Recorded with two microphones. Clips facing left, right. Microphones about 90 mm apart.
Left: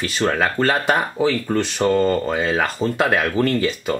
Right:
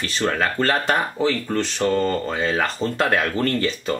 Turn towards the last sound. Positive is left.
turn(degrees=5)  # may be behind; listen again after turning